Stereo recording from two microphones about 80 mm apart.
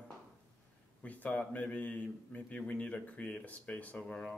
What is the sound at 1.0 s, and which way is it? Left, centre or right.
Speech, centre.